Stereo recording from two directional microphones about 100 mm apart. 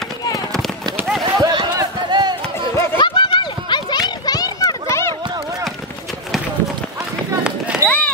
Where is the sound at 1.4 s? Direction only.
45° right (ahead or behind).